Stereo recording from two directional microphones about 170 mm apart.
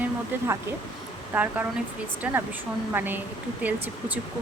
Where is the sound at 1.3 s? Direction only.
10° right (ahead or behind).